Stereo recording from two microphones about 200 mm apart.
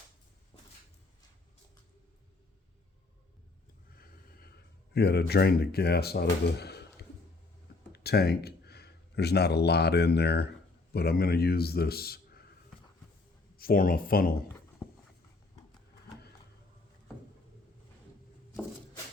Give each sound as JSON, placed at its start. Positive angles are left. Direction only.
{"t": 4.0, "sound": "snort", "side_deg": 50}
{"t": 4.9, "sound": "speech", "side_deg": 55}
{"t": 7.9, "sound": "speech", "side_deg": 55}
{"t": 13.6, "sound": "speech", "side_deg": 45}